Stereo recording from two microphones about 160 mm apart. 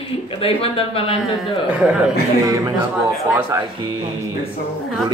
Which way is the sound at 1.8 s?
5° right (ahead or behind).